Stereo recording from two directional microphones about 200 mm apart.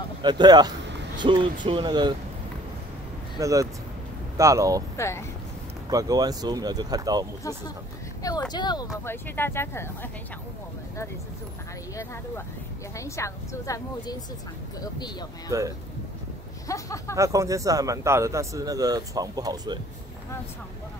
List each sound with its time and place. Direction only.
0.2 s speech: 20° right (ahead or behind)
3.3 s speech: 15° right (ahead or behind)
4.9 s speech: 15° left (ahead or behind)
5.9 s speech: 15° right (ahead or behind)
8.2 s a woman's voice: 20° left (ahead or behind)
12.9 s a woman's voice: 15° left (ahead or behind)
16.6 s a woman's voice: 15° left (ahead or behind)
17.1 s speech: 15° right (ahead or behind)